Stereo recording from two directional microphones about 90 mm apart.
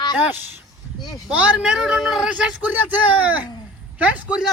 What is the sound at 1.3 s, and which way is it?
Speech, 10° right (ahead or behind).